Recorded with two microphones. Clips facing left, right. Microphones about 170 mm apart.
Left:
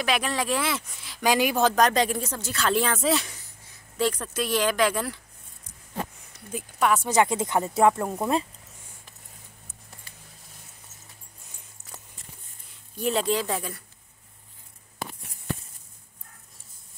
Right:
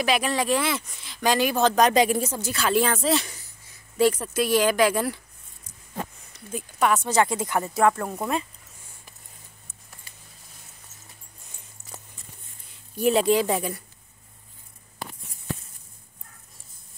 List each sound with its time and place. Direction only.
0.0 s speech: centre (ahead or behind)
1.8 s speech: 5° right (ahead or behind)
6.3 s speech: 5° left (ahead or behind)
7.1 s speech: 20° left (ahead or behind)
12.9 s speech: 10° right (ahead or behind)